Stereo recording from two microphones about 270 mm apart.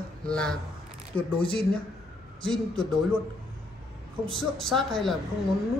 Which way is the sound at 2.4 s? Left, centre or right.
Centre.